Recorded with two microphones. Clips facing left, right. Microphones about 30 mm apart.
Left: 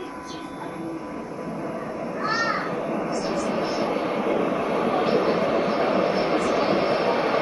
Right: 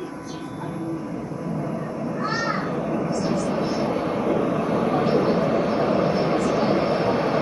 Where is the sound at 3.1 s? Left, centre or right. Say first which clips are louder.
Right 1 dB; centre.